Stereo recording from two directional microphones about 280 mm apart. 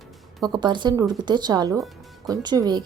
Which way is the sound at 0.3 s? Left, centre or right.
Centre.